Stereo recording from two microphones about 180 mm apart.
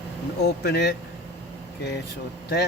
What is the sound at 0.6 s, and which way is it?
Speech, 60° left (ahead or behind).